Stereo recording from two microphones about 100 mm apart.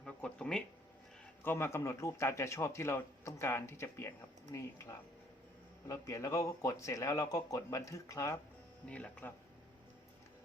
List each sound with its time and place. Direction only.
0.0 s a sound: 10° left (ahead or behind)
1.5 s a man's voice: 25° left (ahead or behind)
8.9 s speech: 10° left (ahead or behind)